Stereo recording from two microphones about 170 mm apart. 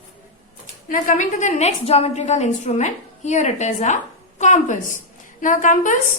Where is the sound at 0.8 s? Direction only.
50° left (ahead or behind).